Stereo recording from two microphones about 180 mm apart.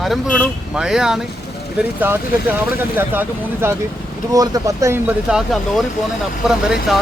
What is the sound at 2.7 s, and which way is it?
Speech, 10° right (ahead or behind).